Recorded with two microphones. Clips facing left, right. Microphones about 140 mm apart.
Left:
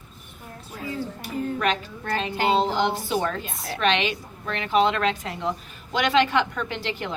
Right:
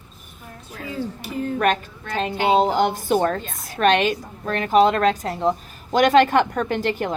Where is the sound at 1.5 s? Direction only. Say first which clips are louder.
Right 4 dB; 50° right (ahead or behind).